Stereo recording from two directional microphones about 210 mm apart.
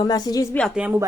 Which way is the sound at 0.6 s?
Centre (ahead or behind).